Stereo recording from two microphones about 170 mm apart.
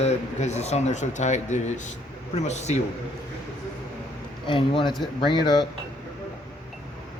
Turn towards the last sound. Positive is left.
turn(degrees=25)  # may be behind; listen again after turning